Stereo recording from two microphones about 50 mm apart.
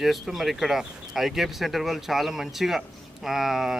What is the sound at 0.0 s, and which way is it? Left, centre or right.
A man's voice, centre.